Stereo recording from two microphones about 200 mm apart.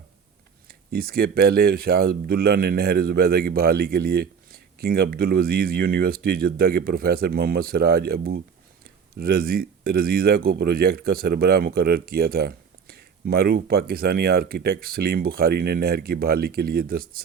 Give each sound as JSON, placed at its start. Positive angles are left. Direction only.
{"t": 0.7, "sound": "speech", "side_deg": -50}